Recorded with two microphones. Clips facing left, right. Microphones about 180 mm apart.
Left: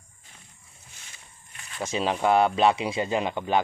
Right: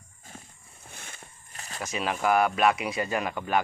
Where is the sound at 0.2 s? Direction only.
45° right (ahead or behind).